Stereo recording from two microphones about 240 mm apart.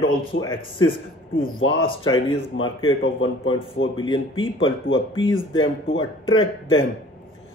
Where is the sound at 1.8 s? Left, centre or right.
Left.